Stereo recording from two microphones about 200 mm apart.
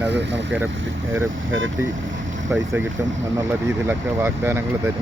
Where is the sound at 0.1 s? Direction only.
60° right (ahead or behind).